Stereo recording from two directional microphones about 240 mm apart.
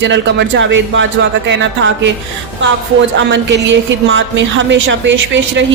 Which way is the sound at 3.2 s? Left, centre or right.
Right.